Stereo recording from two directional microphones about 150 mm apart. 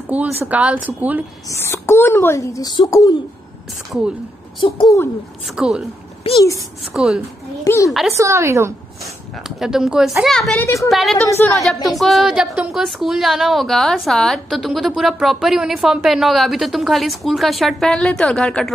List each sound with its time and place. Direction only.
0.1 s speech: 10° right (ahead or behind)
1.5 s a child's voice: 15° left (ahead or behind)
4.6 s speech: 30° left (ahead or behind)
5.4 s a woman's voice: 5° right (ahead or behind)
6.2 s speech: 40° left (ahead or behind)
6.9 s a woman's voice: 5° right (ahead or behind)
7.6 s a child's voice: 20° left (ahead or behind)
8.2 s speech: 20° right (ahead or behind)
9.4 s a woman's voice: 5° right (ahead or behind)
11.2 s a child's voice: 20° left (ahead or behind)
11.6 s a woman's voice: centre (ahead or behind)